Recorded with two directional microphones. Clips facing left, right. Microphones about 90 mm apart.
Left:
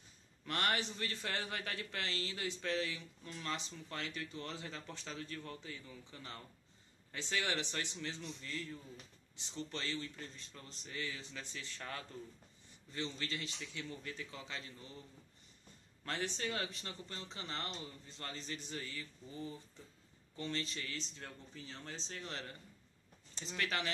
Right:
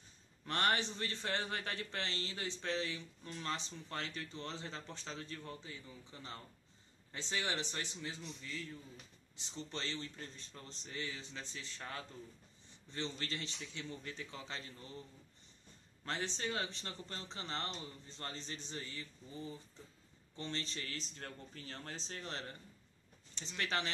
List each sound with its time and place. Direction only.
0.5 s a man's voice: 30° right (ahead or behind)
8.0 s a man's voice: 10° right (ahead or behind)
9.4 s a man's voice: 25° right (ahead or behind)
12.9 s speech: 35° right (ahead or behind)
16.1 s speech: 25° right (ahead or behind); by 21.0 s 40° right (ahead or behind)
21.1 s speech: 55° right (ahead or behind); by 22.6 s 40° right (ahead or behind)
23.6 s speech: 30° right (ahead or behind)